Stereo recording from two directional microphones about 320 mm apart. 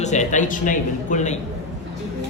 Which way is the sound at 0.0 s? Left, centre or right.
Left.